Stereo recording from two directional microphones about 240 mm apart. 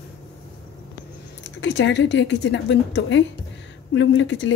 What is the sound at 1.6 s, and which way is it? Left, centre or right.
A woman's voice, left.